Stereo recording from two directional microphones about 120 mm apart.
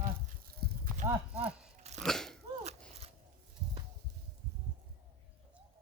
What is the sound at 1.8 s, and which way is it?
Crunch, 70° right (ahead or behind).